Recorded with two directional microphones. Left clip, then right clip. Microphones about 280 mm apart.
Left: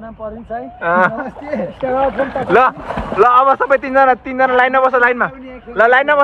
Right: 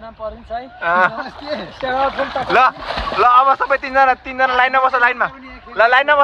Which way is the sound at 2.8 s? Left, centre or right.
Right.